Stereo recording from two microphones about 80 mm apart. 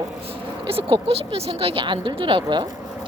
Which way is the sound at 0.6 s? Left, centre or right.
Right.